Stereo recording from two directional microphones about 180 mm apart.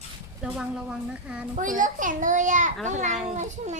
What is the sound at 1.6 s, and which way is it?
A child's voice, 45° right (ahead or behind).